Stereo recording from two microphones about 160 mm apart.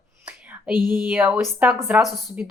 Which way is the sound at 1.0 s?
10° right (ahead or behind).